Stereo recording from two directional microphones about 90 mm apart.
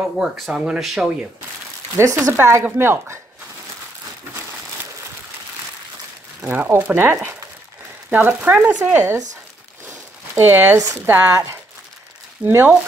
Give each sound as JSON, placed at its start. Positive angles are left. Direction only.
{"t": 0.2, "sound": "speech", "side_deg": -10}
{"t": 1.9, "sound": "speech", "side_deg": -35}
{"t": 6.4, "sound": "speech", "side_deg": -20}
{"t": 9.8, "sound": "a sound", "side_deg": -25}
{"t": 11.0, "sound": "speech", "side_deg": -25}
{"t": 11.2, "sound": "speech", "side_deg": -35}
{"t": 12.4, "sound": "speech", "side_deg": -25}